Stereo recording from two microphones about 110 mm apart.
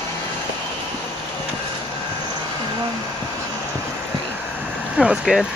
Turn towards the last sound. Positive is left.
turn(degrees=-5)  # may be behind; listen again after turning